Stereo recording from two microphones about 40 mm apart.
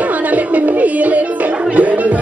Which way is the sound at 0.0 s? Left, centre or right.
Right.